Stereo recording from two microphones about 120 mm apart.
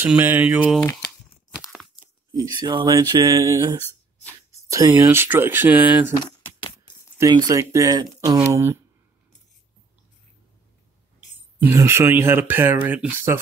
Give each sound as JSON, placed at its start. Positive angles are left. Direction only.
{"t": 0.0, "sound": "speech", "side_deg": -15}
{"t": 2.3, "sound": "speech", "side_deg": -40}
{"t": 3.8, "sound": "a sound", "side_deg": 15}
{"t": 4.5, "sound": "speech", "side_deg": -25}
{"t": 7.2, "sound": "speech", "side_deg": -30}
{"t": 11.6, "sound": "speech", "side_deg": -25}